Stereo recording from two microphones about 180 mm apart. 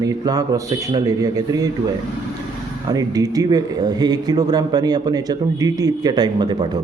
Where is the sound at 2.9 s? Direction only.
20° right (ahead or behind).